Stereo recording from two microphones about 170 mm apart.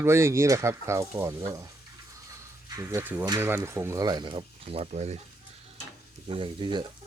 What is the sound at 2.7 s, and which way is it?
Speech, 20° right (ahead or behind).